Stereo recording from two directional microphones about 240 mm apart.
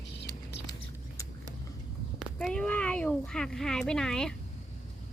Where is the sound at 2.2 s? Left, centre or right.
Centre.